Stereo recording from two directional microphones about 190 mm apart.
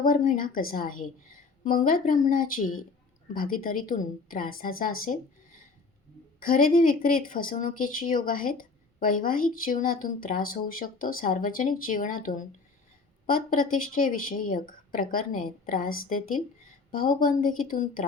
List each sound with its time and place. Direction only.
0.0 s speech: 45° left (ahead or behind)
5.1 s speech: 40° left (ahead or behind)
6.4 s speech: 45° left (ahead or behind)